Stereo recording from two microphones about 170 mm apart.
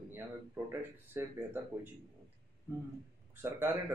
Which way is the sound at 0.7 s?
15° right (ahead or behind).